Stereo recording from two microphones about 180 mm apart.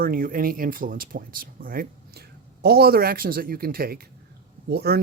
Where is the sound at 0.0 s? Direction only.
55° right (ahead or behind).